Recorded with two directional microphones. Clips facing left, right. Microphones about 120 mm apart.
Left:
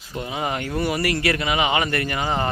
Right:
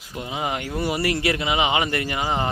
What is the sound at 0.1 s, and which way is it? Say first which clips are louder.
Speech: left 1 dB; 15° right (ahead or behind).